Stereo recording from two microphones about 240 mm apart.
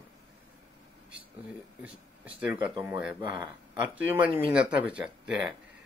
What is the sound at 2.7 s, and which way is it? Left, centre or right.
Speech, centre.